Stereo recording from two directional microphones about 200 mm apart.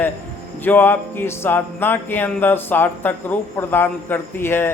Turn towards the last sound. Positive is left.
turn(degrees=10)  # may be behind; listen again after turning